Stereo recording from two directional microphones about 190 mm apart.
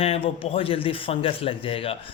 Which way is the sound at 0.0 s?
30° left (ahead or behind).